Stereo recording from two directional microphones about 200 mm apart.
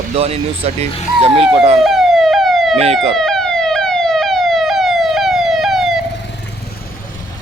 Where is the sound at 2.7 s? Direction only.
30° right (ahead or behind).